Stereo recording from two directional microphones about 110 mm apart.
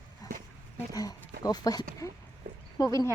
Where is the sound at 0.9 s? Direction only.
35° left (ahead or behind).